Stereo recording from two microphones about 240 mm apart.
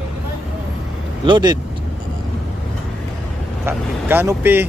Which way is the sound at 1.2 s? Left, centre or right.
Centre.